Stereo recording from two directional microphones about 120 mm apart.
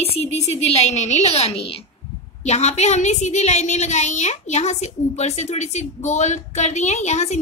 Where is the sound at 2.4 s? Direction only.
65° left (ahead or behind).